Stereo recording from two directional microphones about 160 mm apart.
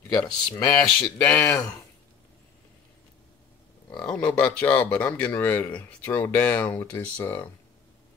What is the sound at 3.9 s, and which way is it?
Speech, 5° left (ahead or behind).